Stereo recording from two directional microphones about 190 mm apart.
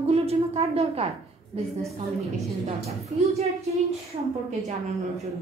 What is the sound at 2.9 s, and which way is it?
Speech, 35° right (ahead or behind).